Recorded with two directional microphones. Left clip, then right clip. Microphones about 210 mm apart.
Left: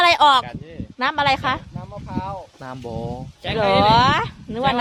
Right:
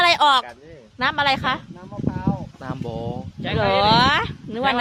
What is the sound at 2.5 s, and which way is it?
Speech, centre (ahead or behind).